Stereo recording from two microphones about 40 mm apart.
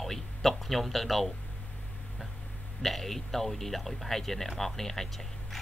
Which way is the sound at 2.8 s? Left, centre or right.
Centre.